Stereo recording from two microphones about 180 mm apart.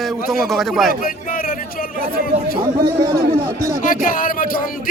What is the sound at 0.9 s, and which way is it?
Speech, 55° left (ahead or behind).